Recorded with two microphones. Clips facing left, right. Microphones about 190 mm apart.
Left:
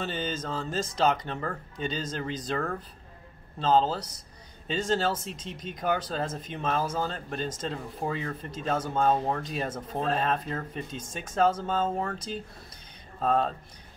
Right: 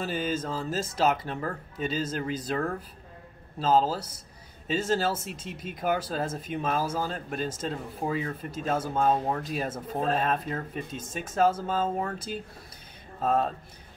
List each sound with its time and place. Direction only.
0.0 s speech: 5° right (ahead or behind)